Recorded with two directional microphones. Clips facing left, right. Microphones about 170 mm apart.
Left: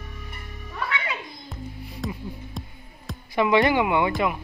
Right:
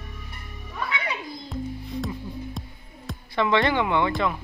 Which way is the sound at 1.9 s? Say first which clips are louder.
Even; centre (ahead or behind).